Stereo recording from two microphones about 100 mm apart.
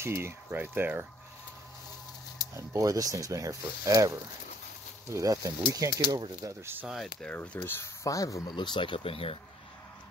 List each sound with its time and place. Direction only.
0.0 s speech: 25° right (ahead or behind)
2.5 s speech: 35° right (ahead or behind)
6.9 s speech: centre (ahead or behind)
7.2 s speech: 20° left (ahead or behind)
8.1 s speech: 35° left (ahead or behind)
8.5 s speech: 50° left (ahead or behind); by 9.4 s 70° left (ahead or behind)